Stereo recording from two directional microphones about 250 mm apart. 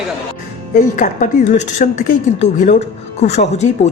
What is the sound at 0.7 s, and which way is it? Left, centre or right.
Speech, left.